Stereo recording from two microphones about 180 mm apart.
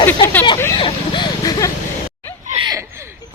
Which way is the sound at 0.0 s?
10° left (ahead or behind).